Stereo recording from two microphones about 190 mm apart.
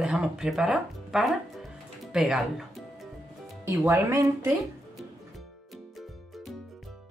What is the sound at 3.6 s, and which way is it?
Speech, 15° right (ahead or behind).